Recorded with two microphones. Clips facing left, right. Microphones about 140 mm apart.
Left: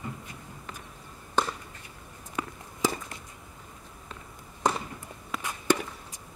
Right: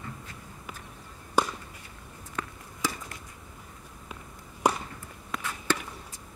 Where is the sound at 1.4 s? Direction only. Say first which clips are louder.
Right 1 dB; 10° right (ahead or behind).